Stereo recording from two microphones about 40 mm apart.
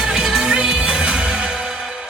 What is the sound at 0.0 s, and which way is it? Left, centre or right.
Music, centre.